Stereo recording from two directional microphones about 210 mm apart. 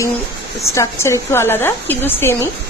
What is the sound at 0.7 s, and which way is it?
A woman's voice, 15° left (ahead or behind).